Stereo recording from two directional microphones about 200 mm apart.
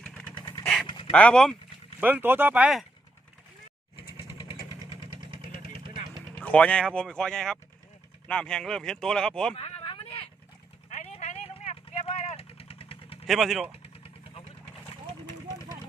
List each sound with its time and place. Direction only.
0.0 s vehicle: 5° left (ahead or behind)
0.3 s vehicle: 25° left (ahead or behind)
0.6 s dog: centre (ahead or behind)
0.9 s dog: 25° left (ahead or behind)
1.1 s speech: 5° left (ahead or behind)
2.0 s speech: 10° right (ahead or behind)
3.9 s vehicle: 25° left (ahead or behind)
4.9 s vehicle: 25° right (ahead or behind)
6.2 s speech: 5° left (ahead or behind)
9.6 s vehicle: 30° left (ahead or behind)
13.2 s speech: centre (ahead or behind)
13.8 s vehicle: 30° left (ahead or behind)